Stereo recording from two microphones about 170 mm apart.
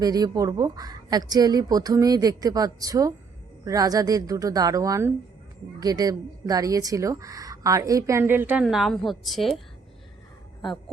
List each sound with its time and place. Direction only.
0.0 s a woman's voice: 20° right (ahead or behind); by 9.6 s centre (ahead or behind)
10.6 s speech: centre (ahead or behind)